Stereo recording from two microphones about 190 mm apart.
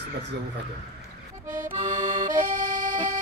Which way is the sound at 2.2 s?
45° right (ahead or behind).